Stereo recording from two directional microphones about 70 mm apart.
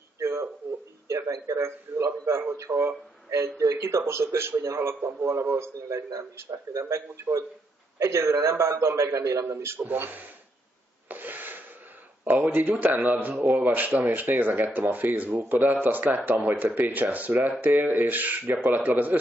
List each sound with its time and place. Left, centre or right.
0.2 s a sound: right
1.0 s a man's voice: right
5.8 s a man's voice: right
9.5 s a man's voice: right
9.8 s speech: right
11.1 s rub: right
12.3 s speech: right